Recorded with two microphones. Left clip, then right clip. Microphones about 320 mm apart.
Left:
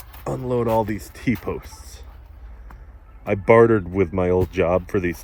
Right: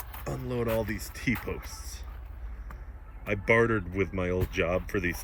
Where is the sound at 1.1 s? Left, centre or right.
Centre.